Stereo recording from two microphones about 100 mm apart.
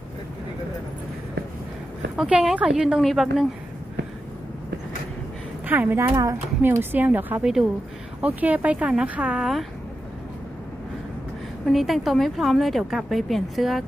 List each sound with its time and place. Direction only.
2.1 s a woman's voice: 10° right (ahead or behind)
5.6 s speech: 20° right (ahead or behind)
7.4 s a woman's voice: 5° right (ahead or behind)
8.2 s speech: 15° right (ahead or behind)
11.6 s a woman's voice: centre (ahead or behind)